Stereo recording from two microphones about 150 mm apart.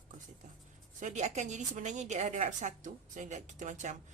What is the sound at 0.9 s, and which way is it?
A woman's voice, 55° right (ahead or behind).